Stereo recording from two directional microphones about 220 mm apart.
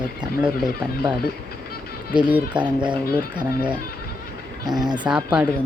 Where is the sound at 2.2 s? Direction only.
5° right (ahead or behind).